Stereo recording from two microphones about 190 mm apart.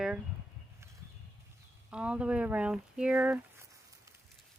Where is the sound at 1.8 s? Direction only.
5° right (ahead or behind).